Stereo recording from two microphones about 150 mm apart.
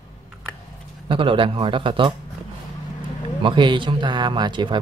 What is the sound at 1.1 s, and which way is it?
Speech, 35° right (ahead or behind).